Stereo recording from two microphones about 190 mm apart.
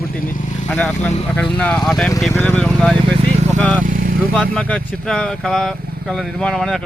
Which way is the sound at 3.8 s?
45° right (ahead or behind).